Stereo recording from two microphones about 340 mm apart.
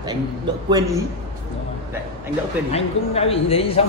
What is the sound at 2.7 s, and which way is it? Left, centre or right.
Speech, centre.